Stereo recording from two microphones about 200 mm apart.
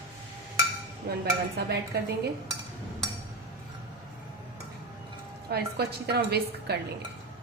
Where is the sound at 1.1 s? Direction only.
50° right (ahead or behind).